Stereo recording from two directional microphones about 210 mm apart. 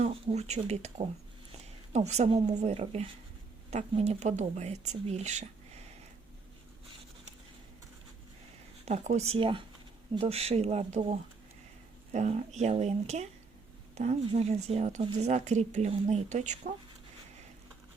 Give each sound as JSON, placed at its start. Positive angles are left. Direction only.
{"t": 0.0, "sound": "speech", "side_deg": -30}
{"t": 8.8, "sound": "speech", "side_deg": -30}